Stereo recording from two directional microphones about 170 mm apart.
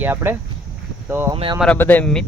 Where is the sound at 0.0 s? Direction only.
10° right (ahead or behind).